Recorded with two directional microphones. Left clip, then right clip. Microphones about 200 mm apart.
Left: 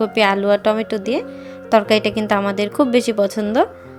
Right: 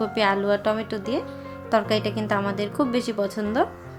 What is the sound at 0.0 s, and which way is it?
A woman's voice, 35° left (ahead or behind).